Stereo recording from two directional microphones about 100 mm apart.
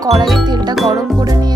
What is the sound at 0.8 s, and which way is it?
Music, 40° right (ahead or behind).